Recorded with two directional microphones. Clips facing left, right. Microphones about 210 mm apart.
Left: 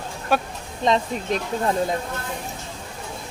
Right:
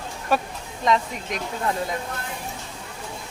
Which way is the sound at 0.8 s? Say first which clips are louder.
Left 2 dB; 30° left (ahead or behind).